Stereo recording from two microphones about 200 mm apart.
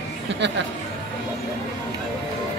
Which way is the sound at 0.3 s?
65° right (ahead or behind).